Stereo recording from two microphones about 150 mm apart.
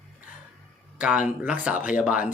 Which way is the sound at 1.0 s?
10° right (ahead or behind).